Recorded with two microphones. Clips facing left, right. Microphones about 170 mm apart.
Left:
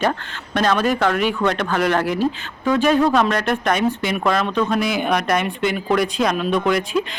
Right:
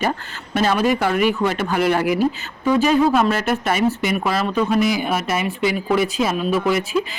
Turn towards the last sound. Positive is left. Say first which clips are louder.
# even
turn(degrees=-5)  # may be behind; listen again after turning